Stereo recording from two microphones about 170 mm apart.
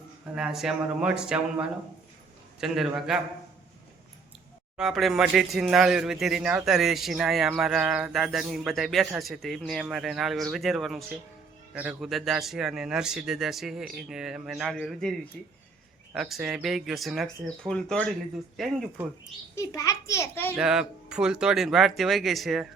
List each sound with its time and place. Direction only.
0.3 s speech: 5° right (ahead or behind)
4.8 s a child's voice: centre (ahead or behind)
19.5 s a child's voice: 20° left (ahead or behind)
20.6 s speech: 5° right (ahead or behind)